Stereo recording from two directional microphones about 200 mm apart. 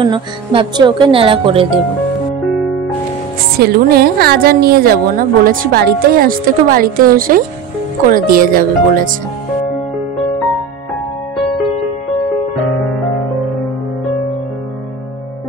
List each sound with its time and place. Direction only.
0.0 s speech: 25° right (ahead or behind)
3.5 s a woman's voice: 50° right (ahead or behind)